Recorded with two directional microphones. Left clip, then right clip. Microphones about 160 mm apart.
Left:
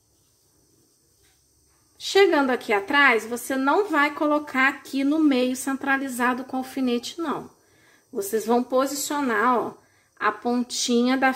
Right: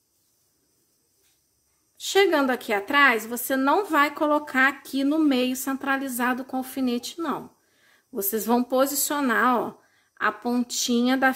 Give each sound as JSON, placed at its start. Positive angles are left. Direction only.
{"t": 2.0, "sound": "a woman's voice", "side_deg": -20}
{"t": 8.1, "sound": "a woman's voice", "side_deg": -30}